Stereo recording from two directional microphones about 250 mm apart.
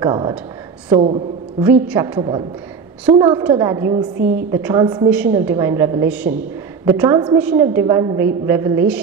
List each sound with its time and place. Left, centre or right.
0.0 s a woman's voice: centre
1.6 s a woman's voice: centre
2.1 s a woman's voice: centre